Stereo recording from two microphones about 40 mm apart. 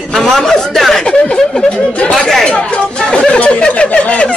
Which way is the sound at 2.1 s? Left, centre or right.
Centre.